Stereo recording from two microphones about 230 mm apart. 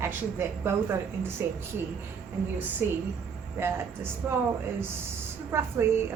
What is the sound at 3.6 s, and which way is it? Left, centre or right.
Speech, centre.